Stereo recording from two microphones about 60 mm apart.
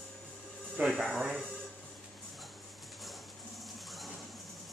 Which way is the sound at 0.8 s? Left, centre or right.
Right.